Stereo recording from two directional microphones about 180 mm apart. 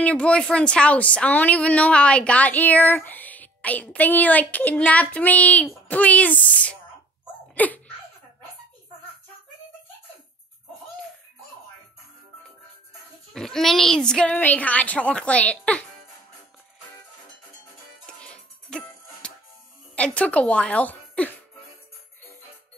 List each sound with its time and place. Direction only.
0.0 s a woman's voice: 5° left (ahead or behind)
7.5 s laughter: 10° left (ahead or behind)
13.3 s a woman's voice: centre (ahead or behind)
18.0 s music: 5° left (ahead or behind)
20.0 s a woman's voice: 5° left (ahead or behind)